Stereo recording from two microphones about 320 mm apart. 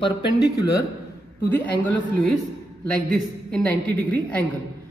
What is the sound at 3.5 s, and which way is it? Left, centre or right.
Speech, centre.